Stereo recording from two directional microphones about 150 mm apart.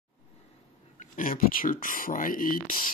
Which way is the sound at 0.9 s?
65° left (ahead or behind).